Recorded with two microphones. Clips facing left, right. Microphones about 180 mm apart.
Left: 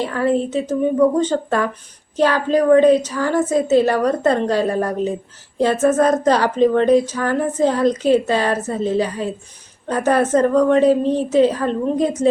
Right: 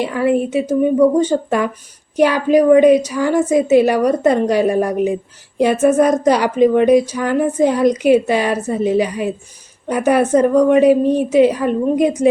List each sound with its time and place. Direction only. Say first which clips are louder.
0.0 s speech: right 2 dB; 15° right (ahead or behind)